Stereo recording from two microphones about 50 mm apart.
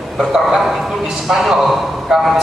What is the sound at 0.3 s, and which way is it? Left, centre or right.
A man's voice, centre.